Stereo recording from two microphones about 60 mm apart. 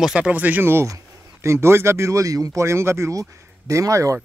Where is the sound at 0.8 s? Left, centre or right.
Right.